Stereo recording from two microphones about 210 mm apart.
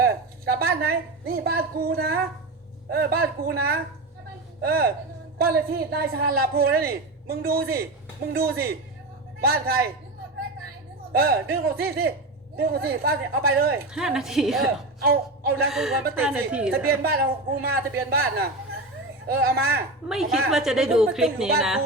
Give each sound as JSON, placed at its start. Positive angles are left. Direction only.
{"t": 0.0, "sound": "a woman's voice", "side_deg": -45}
{"t": 11.1, "sound": "a man's voice", "side_deg": -45}
{"t": 13.9, "sound": "a woman's voice", "side_deg": 0}
{"t": 15.0, "sound": "a man's voice", "side_deg": -50}
{"t": 15.7, "sound": "a woman's voice", "side_deg": 0}
{"t": 16.7, "sound": "a man's voice", "side_deg": -45}
{"t": 20.1, "sound": "a woman's voice", "side_deg": 0}